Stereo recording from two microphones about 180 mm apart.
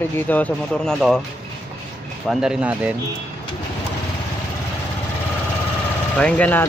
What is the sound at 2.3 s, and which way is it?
Speech, 5° right (ahead or behind).